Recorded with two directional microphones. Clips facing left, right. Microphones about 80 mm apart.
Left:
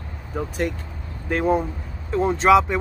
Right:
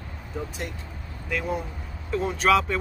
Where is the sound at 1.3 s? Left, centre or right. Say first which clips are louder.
Left 8 dB; left.